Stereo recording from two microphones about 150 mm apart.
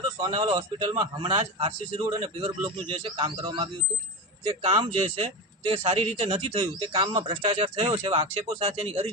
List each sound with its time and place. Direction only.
0.2 s speech: 35° right (ahead or behind)